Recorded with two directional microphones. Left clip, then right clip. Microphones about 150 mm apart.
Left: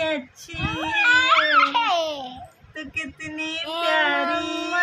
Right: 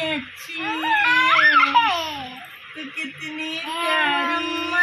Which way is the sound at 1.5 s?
60° left (ahead or behind).